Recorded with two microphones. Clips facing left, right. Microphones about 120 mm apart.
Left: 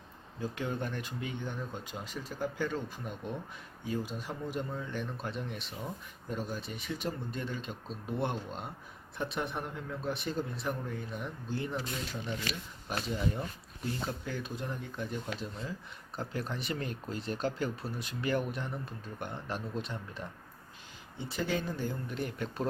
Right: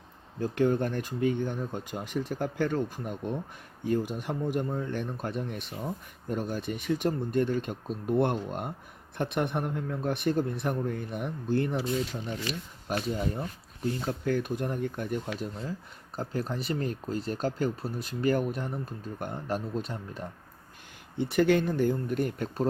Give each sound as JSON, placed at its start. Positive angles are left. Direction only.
{"t": 0.3, "sound": "speech", "side_deg": -55}
{"t": 12.9, "sound": "speech", "side_deg": -45}
{"t": 14.3, "sound": "speech", "side_deg": -55}
{"t": 16.1, "sound": "speech", "side_deg": -40}
{"t": 21.2, "sound": "speech", "side_deg": -65}